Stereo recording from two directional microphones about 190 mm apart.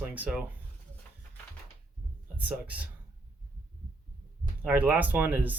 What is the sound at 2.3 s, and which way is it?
Speech, 10° right (ahead or behind).